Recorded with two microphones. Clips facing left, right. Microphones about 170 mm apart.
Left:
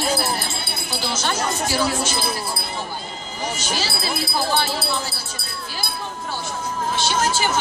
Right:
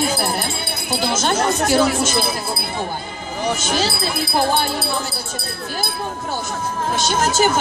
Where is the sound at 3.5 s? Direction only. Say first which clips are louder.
Right 7 dB; 55° right (ahead or behind).